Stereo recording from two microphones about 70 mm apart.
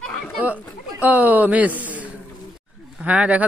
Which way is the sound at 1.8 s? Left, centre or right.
Right.